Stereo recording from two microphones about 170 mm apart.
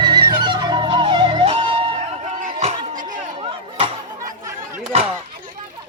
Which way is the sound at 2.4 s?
40° right (ahead or behind).